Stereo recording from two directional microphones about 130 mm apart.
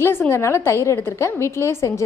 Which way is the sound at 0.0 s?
20° left (ahead or behind).